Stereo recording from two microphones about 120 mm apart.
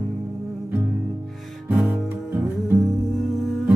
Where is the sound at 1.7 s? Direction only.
15° right (ahead or behind).